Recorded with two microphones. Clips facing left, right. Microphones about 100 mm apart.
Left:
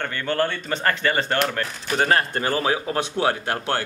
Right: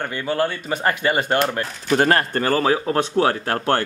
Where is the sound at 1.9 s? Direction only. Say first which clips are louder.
Right 3 dB; 50° right (ahead or behind).